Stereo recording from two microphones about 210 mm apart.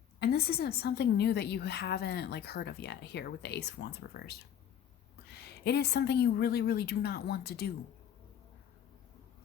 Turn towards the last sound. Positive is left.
turn(degrees=50)  # may be behind; listen again after turning